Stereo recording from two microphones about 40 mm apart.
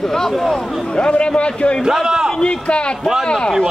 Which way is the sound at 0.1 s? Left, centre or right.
Centre.